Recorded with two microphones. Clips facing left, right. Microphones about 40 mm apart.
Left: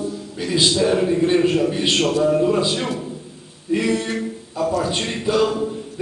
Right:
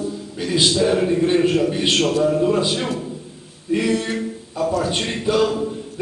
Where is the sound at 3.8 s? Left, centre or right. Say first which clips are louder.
Right 1 dB; right.